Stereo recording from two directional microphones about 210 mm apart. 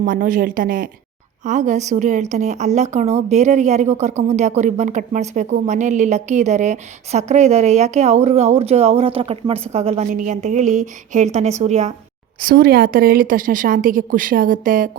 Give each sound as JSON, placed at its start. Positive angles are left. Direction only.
{"t": 0.0, "sound": "a woman's voice", "side_deg": -40}
{"t": 12.4, "sound": "a woman's voice", "side_deg": -45}